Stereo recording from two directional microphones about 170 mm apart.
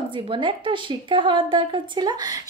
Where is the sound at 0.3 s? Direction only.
30° right (ahead or behind).